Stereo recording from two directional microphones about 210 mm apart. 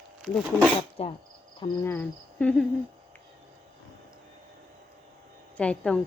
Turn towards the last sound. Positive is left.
turn(degrees=5)  # may be behind; listen again after turning